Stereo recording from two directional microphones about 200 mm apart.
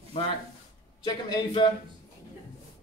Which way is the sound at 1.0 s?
20° left (ahead or behind).